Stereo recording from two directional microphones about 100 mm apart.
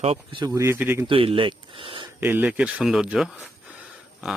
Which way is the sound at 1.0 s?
65° right (ahead or behind).